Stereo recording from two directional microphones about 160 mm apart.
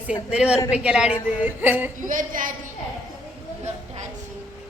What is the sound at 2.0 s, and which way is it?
Speech, 55° right (ahead or behind).